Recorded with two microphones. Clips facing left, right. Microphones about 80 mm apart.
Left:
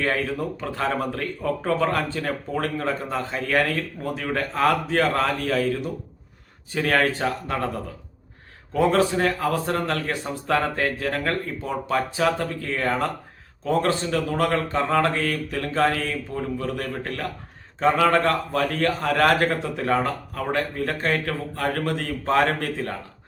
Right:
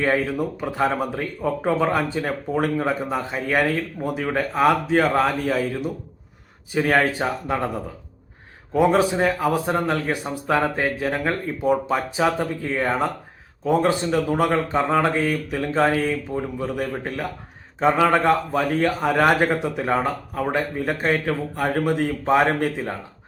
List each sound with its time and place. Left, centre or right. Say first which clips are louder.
0.0 s speech: right 3 dB; centre
8.7 s speech: right 2 dB; centre